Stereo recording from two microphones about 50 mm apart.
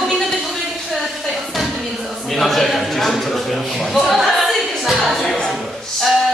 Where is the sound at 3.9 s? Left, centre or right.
Centre.